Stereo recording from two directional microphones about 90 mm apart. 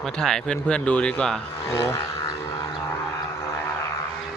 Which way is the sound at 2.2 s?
50° left (ahead or behind).